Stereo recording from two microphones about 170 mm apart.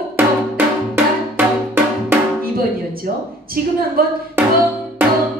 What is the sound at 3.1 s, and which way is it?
A woman's voice, 55° right (ahead or behind).